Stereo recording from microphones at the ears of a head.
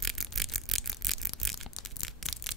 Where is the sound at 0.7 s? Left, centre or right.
Centre.